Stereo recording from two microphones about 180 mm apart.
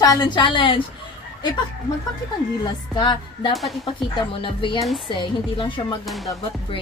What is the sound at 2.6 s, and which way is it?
Speech, 25° left (ahead or behind).